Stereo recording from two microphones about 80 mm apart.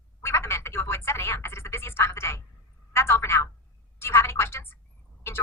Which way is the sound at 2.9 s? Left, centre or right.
Left.